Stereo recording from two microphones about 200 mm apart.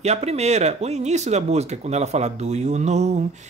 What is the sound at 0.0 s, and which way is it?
A woman's voice, 30° right (ahead or behind).